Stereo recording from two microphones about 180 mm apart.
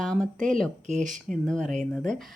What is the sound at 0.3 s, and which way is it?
Speech, 45° right (ahead or behind).